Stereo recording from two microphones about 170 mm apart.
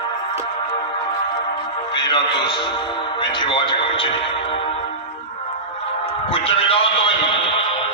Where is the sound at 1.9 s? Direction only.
25° left (ahead or behind).